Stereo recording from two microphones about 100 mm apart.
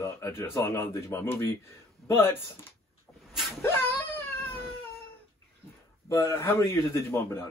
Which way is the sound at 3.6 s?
20° left (ahead or behind).